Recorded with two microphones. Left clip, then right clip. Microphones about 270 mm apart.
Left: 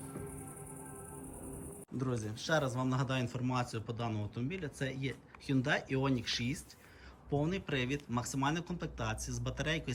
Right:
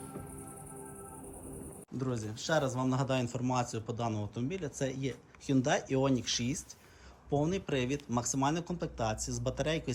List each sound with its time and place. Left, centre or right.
2.0 s speech: centre